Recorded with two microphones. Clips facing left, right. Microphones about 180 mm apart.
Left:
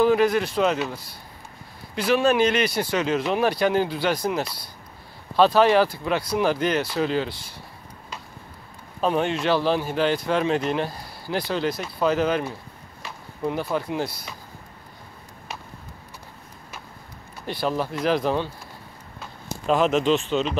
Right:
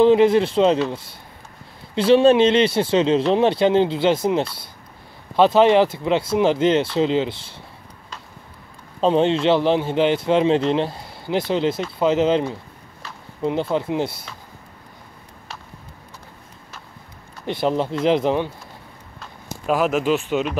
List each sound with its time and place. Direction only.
0.0 s a man's voice: 25° right (ahead or behind)
9.0 s a man's voice: 25° right (ahead or behind)
17.5 s a man's voice: 20° right (ahead or behind)
19.6 s speech: 5° right (ahead or behind)